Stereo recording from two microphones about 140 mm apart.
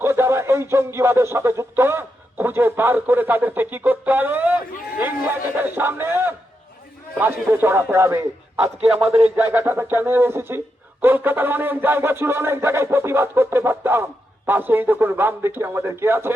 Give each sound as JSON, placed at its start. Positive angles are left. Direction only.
{"t": 0.0, "sound": "speech", "side_deg": -20}
{"t": 5.5, "sound": "music", "side_deg": -15}